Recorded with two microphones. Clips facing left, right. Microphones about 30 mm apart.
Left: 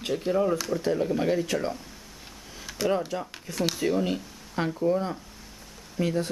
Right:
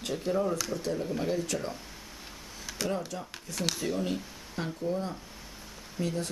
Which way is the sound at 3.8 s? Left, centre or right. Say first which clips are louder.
Left 5 dB; centre.